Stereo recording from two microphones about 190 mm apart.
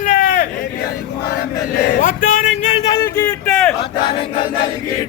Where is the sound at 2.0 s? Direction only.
45° left (ahead or behind).